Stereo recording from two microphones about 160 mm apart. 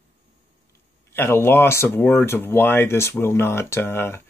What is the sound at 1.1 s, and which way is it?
Speech, 15° left (ahead or behind).